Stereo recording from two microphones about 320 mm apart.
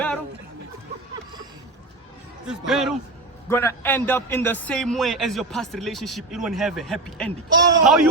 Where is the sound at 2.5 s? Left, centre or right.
Centre.